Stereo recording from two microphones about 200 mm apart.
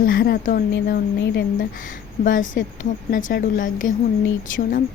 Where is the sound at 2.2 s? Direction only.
40° left (ahead or behind).